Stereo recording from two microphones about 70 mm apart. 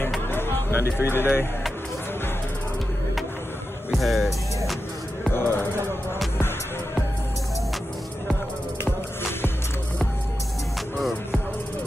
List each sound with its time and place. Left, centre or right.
0.3 s music: left
0.8 s speech: right
1.1 s speech: left
3.9 s music: centre
5.3 s music: left
11.0 s music: centre